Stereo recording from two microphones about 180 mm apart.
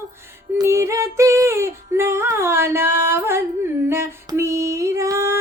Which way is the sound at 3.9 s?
15° right (ahead or behind).